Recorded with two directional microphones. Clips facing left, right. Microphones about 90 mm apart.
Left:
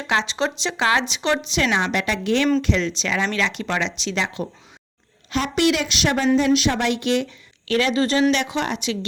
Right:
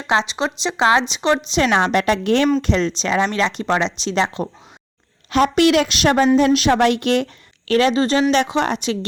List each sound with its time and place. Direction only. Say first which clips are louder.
0.1 s speech: right 3 dB; 20° right (ahead or behind)
1.5 s speech: right 5 dB; 40° right (ahead or behind)
5.3 s a woman's voice: right 6 dB; 50° right (ahead or behind)
7.7 s speech: right 4 dB; 35° right (ahead or behind)